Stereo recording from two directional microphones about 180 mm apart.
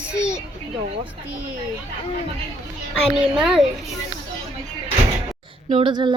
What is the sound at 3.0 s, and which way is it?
Speech, 5° right (ahead or behind).